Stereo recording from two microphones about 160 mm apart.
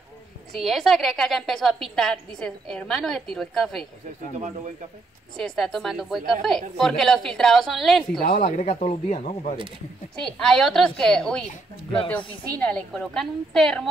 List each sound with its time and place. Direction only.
0.6 s a woman's voice: centre (ahead or behind)
5.4 s a woman's voice: centre (ahead or behind)
8.4 s speech: 45° left (ahead or behind)
10.2 s a woman's voice: 5° left (ahead or behind)
12.5 s a woman's voice: 5° left (ahead or behind)